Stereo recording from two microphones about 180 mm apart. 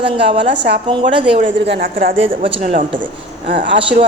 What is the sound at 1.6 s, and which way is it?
Speech, 65° right (ahead or behind).